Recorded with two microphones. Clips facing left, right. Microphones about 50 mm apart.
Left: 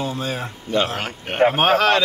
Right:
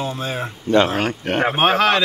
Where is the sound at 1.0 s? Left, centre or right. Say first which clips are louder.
Even; right.